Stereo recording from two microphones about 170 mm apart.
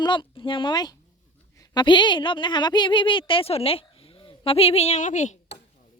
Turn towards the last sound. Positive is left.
turn(degrees=45)  # may be behind; listen again after turning